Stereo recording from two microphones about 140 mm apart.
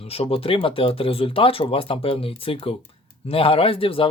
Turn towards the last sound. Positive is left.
turn(degrees=40)  # may be behind; listen again after turning